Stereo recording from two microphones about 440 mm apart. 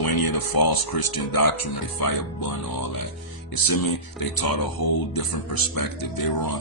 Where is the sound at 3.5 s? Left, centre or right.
Left.